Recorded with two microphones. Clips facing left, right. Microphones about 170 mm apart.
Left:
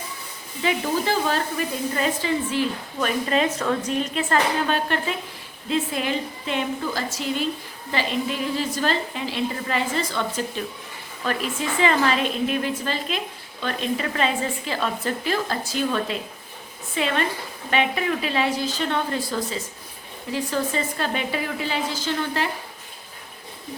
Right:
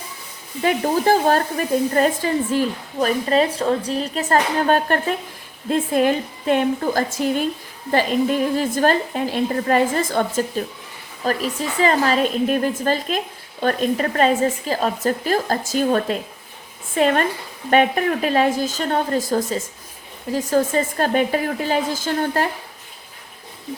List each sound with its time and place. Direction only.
0.6 s a woman's voice: 45° right (ahead or behind)